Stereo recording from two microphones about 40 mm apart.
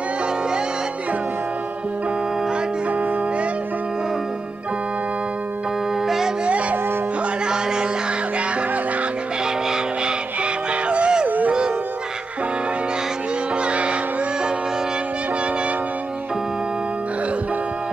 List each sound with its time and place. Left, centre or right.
6.0 s music: centre
7.4 s a sound: centre
10.4 s music: right
11.2 s music: right
13.6 s music: right